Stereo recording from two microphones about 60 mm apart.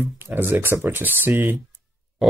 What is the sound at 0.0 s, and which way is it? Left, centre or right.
Speech, right.